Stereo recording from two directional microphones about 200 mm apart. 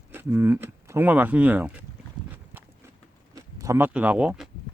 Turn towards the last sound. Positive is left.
turn(degrees=-5)  # may be behind; listen again after turning